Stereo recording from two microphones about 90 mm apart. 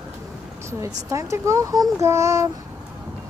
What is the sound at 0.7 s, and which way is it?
Speech, 35° right (ahead or behind).